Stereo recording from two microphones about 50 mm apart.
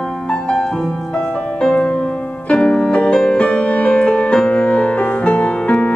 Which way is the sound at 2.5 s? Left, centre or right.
Centre.